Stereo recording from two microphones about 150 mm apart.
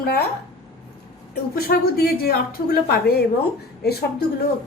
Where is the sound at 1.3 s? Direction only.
90° left.